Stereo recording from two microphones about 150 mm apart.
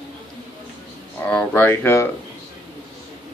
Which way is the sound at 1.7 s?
15° left (ahead or behind).